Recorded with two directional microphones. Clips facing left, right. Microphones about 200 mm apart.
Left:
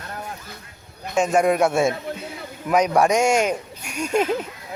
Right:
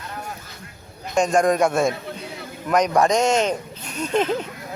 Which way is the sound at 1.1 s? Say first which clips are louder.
Even; 5° left (ahead or behind).